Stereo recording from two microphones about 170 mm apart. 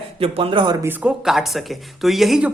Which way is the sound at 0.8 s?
5° right (ahead or behind).